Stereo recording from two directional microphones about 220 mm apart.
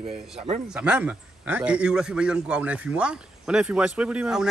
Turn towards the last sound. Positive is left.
turn(degrees=-5)  # may be behind; listen again after turning